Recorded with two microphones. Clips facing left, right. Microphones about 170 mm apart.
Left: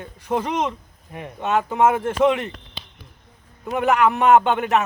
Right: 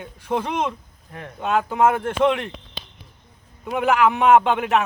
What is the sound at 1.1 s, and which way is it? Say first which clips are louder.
Speech: left 2 dB; 15° left (ahead or behind).